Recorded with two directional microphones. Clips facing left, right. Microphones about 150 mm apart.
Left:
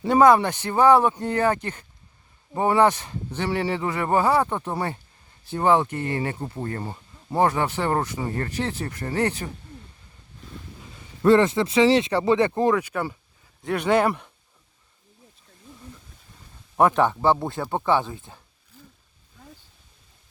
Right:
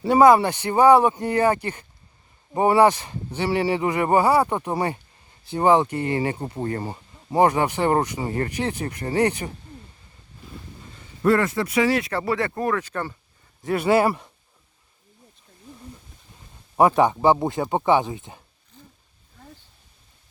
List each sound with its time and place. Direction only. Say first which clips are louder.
0.1 s speech: right 2 dB; 10° right (ahead or behind)
11.3 s speech: left 3 dB; 25° left (ahead or behind)
13.6 s speech: right 2 dB; 5° right (ahead or behind)
16.7 s speech: right 2 dB; 10° right (ahead or behind)